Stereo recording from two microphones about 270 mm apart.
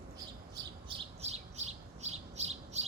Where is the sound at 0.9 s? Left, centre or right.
Right.